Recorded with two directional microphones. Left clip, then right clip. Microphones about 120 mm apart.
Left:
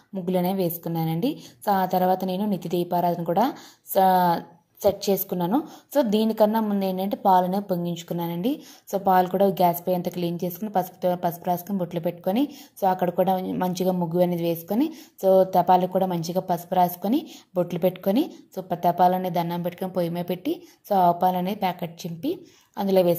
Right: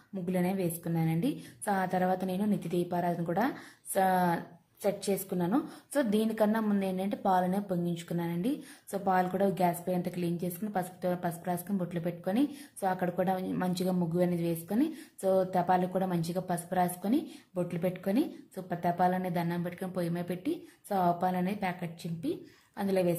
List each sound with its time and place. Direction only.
0.3 s a woman's voice: 50° left (ahead or behind)